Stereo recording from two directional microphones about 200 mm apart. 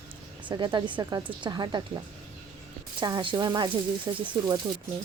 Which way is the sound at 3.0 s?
20° right (ahead or behind).